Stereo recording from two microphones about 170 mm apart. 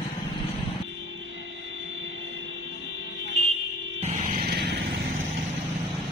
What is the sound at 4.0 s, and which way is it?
Music, 40° right (ahead or behind).